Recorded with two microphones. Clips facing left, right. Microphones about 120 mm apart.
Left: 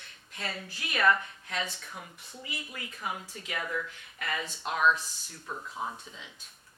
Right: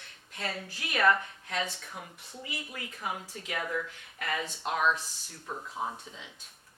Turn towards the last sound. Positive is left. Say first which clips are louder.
# right 1 dB
turn(degrees=-30)  # may be behind; listen again after turning